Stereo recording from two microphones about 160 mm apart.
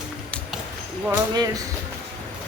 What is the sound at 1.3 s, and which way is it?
Speech, 25° right (ahead or behind).